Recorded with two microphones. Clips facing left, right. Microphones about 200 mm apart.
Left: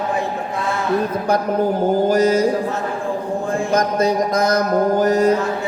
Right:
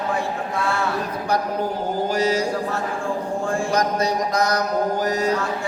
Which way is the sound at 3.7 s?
50° left (ahead or behind).